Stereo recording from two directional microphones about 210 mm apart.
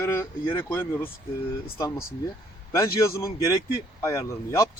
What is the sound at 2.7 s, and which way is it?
Speech, 15° left (ahead or behind).